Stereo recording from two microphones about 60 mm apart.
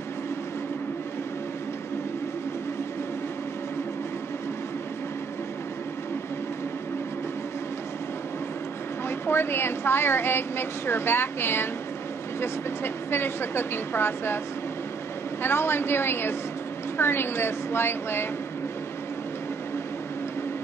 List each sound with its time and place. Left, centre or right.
9.2 s a woman's voice: left
15.4 s a woman's voice: left